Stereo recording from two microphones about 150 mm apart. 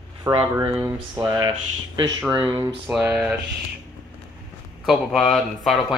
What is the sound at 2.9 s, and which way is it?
Speech, 10° right (ahead or behind).